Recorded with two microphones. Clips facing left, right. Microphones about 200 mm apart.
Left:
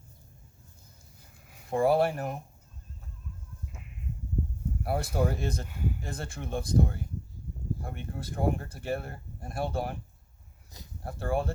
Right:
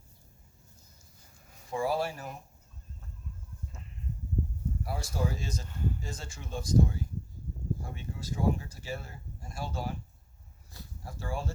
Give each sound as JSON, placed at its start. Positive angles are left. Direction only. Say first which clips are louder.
{"t": 1.7, "sound": "speech", "louder": "left 6 dB", "side_deg": 55}
{"t": 4.8, "sound": "speech", "louder": "left 6 dB", "side_deg": 60}
{"t": 5.6, "sound": "speech", "louder": "left 1 dB", "side_deg": 10}
{"t": 6.0, "sound": "speech", "louder": "left 5 dB", "side_deg": 55}
{"t": 11.0, "sound": "speech", "louder": "left 7 dB", "side_deg": 55}